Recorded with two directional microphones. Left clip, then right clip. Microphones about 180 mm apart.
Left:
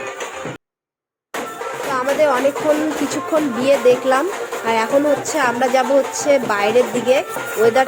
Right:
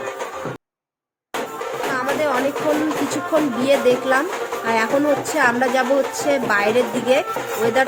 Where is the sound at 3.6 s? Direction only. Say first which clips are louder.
Left 5 dB; 15° left (ahead or behind).